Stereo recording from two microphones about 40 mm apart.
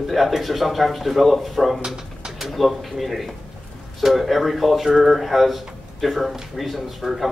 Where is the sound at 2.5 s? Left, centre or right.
Centre.